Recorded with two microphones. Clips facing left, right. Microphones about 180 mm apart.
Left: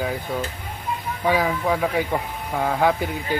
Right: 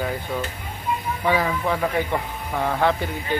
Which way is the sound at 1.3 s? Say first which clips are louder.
Left 1 dB; 10° left (ahead or behind).